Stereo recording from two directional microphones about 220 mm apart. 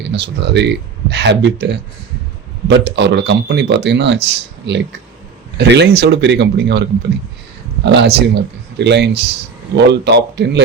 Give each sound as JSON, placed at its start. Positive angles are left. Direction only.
{"t": 0.0, "sound": "speech", "side_deg": -50}
{"t": 7.9, "sound": "speech", "side_deg": -50}